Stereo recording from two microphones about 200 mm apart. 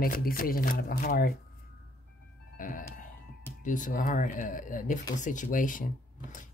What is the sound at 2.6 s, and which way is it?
Music, 40° left (ahead or behind).